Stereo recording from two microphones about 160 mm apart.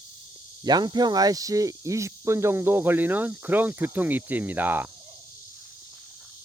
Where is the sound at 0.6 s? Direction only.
25° right (ahead or behind).